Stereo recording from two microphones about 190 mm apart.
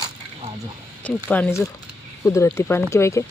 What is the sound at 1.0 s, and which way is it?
Speech, 10° left (ahead or behind).